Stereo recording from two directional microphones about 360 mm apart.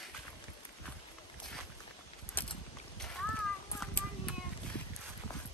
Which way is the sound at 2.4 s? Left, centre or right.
Centre.